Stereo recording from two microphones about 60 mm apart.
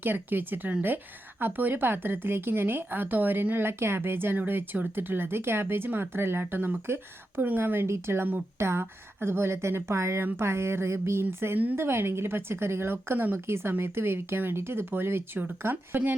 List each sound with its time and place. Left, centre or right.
0.0 s a woman's voice: right